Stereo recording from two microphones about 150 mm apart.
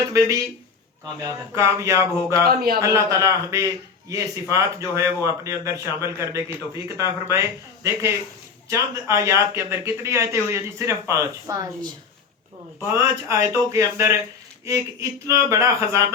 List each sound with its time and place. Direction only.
0.1 s speech: 20° right (ahead or behind)
2.4 s speech: 90° right
2.8 s speech: 20° right (ahead or behind)
8.7 s speech: 20° right (ahead or behind)
12.8 s speech: 20° right (ahead or behind)